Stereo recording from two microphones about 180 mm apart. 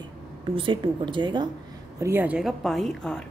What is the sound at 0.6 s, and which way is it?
Speech, 25° right (ahead or behind).